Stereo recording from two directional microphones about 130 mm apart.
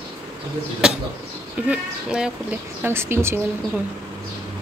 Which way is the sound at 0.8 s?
5° right (ahead or behind).